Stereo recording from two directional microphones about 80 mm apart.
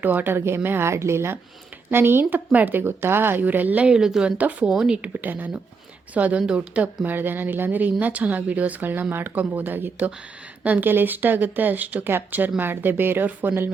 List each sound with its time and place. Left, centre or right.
0.0 s speech: right; by 4.4 s centre
4.4 s speech: centre
4.7 s speech: centre